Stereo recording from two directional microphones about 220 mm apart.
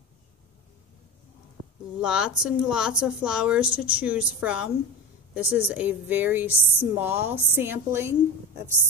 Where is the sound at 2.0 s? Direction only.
5° right (ahead or behind).